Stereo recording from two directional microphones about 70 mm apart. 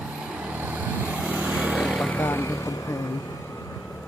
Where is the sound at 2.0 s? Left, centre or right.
Left.